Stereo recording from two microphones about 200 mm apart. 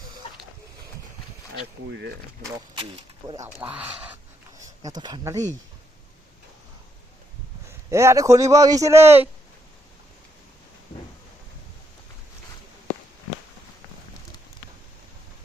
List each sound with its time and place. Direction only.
1.9 s speech: 60° right (ahead or behind)
3.2 s a man's voice: 15° right (ahead or behind)
4.5 s speech: 20° right (ahead or behind)
7.9 s a man's voice: 15° right (ahead or behind)